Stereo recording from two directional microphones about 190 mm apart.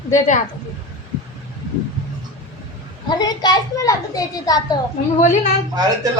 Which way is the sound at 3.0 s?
20° left (ahead or behind).